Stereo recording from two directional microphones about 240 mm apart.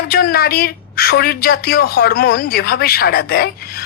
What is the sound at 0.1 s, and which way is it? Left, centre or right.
A woman's voice, left.